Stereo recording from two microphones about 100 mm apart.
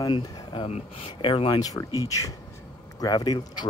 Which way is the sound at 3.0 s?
40° left (ahead or behind).